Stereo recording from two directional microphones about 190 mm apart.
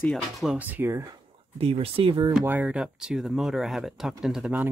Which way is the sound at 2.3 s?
5° right (ahead or behind).